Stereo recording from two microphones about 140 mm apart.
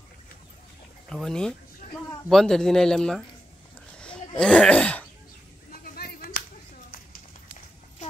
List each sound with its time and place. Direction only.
1.0 s speech: 5° left (ahead or behind)
4.0 s throat clearing: 5° left (ahead or behind)
5.9 s a sound: 90° left